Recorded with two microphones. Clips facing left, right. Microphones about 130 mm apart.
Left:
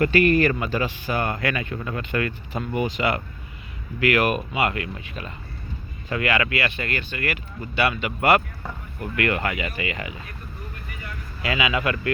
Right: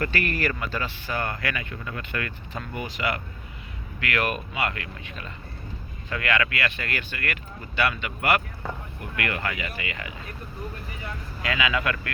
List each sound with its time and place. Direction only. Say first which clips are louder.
0.0 s speech: left 9 dB; 20° left (ahead or behind)
9.1 s speech: left 5 dB; 30° left (ahead or behind)
11.4 s speech: left 2 dB; 15° left (ahead or behind)